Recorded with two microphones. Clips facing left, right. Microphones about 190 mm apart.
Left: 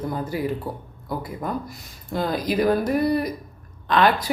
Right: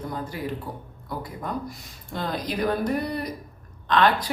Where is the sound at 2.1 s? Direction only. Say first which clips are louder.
Left 6 dB; 5° left (ahead or behind).